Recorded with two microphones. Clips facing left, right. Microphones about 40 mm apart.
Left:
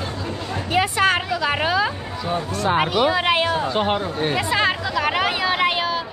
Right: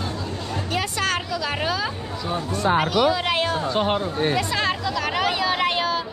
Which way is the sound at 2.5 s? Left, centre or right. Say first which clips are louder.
Right 1 dB; left.